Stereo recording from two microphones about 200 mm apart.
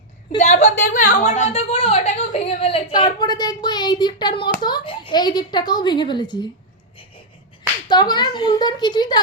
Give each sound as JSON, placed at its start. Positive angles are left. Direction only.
{"t": 0.3, "sound": "a woman's voice", "side_deg": 35}
{"t": 7.9, "sound": "a woman's voice", "side_deg": 20}